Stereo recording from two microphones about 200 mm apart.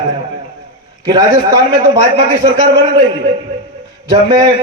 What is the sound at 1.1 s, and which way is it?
A man's voice, 20° right (ahead or behind).